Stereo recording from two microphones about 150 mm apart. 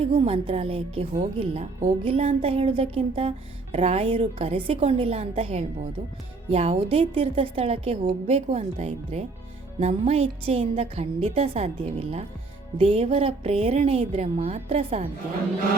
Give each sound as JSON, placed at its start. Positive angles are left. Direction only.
{"t": 0.0, "sound": "music", "side_deg": -40}